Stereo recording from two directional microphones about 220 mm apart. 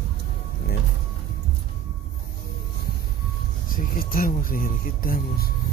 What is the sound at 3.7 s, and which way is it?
Speech, 40° left (ahead or behind).